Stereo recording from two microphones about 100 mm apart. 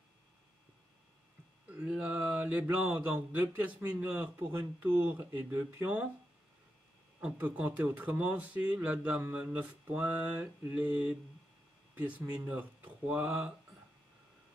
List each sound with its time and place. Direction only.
1.7 s speech: 10° right (ahead or behind)
7.2 s speech: 15° right (ahead or behind)